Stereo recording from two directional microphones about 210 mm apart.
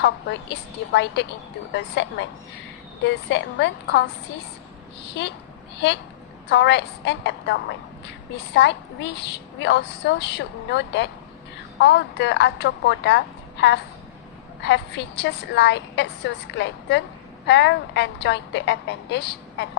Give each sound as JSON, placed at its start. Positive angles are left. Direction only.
{"t": 0.9, "sound": "a woman's voice", "side_deg": 55}
{"t": 5.2, "sound": "a woman's voice", "side_deg": 55}